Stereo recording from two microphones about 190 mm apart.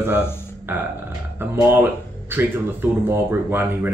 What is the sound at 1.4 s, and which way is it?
Speech, 10° right (ahead or behind).